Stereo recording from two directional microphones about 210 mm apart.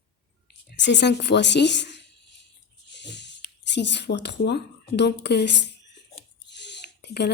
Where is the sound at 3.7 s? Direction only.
55° left (ahead or behind).